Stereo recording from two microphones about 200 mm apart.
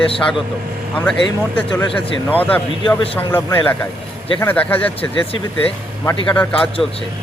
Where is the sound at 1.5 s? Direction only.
5° left (ahead or behind).